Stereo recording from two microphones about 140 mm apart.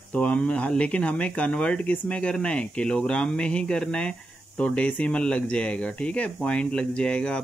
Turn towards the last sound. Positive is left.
turn(degrees=5)  # may be behind; listen again after turning